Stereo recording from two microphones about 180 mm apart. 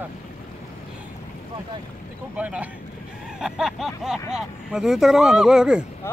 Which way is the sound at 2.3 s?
5° right (ahead or behind).